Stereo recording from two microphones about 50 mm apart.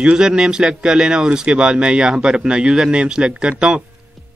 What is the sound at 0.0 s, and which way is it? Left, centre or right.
Speech, centre.